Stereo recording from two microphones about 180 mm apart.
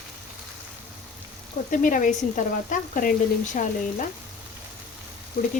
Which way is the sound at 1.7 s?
45° left (ahead or behind).